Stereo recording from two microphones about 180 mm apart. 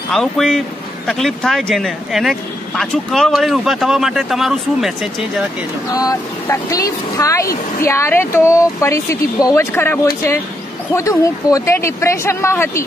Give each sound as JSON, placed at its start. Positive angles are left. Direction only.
{"t": 0.1, "sound": "speech", "side_deg": 0}
{"t": 5.9, "sound": "speech", "side_deg": 20}